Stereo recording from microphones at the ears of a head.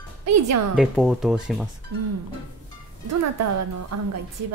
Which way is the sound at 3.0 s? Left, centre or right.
Right.